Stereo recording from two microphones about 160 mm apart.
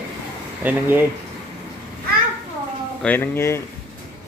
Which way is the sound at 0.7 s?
10° right (ahead or behind).